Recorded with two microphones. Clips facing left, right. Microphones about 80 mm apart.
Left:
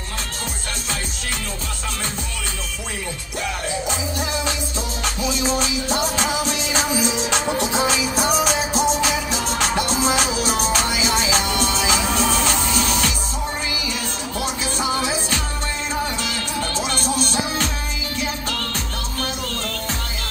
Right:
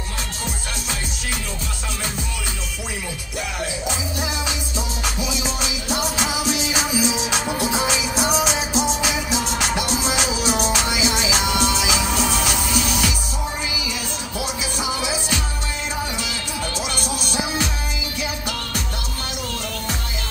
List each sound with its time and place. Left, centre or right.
5.6 s music: left
7.3 s music: centre
8.2 s music: left
12.3 s music: centre
16.7 s music: centre